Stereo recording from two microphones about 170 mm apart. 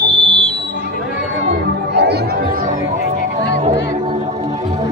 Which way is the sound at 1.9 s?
75° right (ahead or behind).